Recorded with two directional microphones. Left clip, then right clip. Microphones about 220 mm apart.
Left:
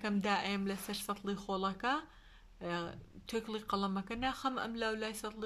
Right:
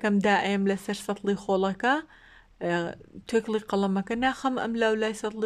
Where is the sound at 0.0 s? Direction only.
35° right (ahead or behind).